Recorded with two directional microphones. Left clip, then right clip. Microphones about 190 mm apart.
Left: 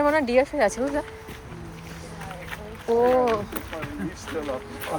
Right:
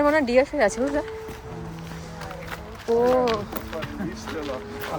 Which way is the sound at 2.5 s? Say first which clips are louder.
Even; 15° right (ahead or behind).